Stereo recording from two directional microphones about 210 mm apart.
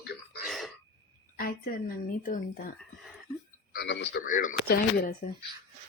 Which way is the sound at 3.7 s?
55° left (ahead or behind).